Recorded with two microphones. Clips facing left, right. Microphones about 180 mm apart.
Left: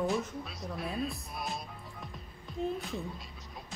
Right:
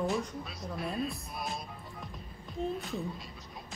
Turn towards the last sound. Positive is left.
turn(degrees=0)  # may be behind; listen again after turning